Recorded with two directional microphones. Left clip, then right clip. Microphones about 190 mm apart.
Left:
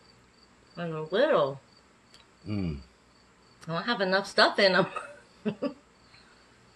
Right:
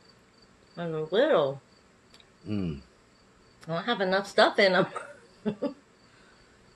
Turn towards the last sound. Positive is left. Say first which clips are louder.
# right 1 dB
turn(degrees=-5)  # may be behind; listen again after turning